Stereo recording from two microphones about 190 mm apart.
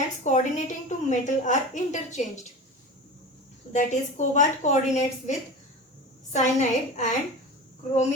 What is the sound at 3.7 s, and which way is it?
A woman's voice, 40° left (ahead or behind).